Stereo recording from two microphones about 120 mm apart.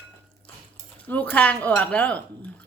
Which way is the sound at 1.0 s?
15° left (ahead or behind).